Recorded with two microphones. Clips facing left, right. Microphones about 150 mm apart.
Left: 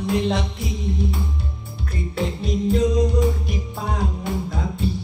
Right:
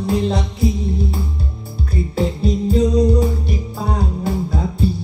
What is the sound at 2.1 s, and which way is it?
Music, 35° right (ahead or behind).